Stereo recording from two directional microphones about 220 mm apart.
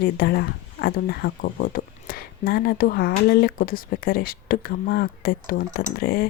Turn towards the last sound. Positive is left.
turn(degrees=40)  # may be behind; listen again after turning